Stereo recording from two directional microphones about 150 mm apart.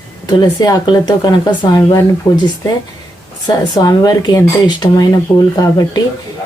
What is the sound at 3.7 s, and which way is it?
Speech, 25° left (ahead or behind).